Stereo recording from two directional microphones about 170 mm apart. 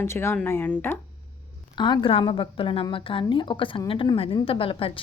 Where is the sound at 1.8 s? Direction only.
25° left (ahead or behind).